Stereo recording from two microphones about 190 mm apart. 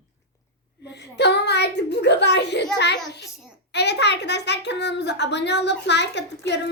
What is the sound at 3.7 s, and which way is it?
A child's voice, 60° left (ahead or behind).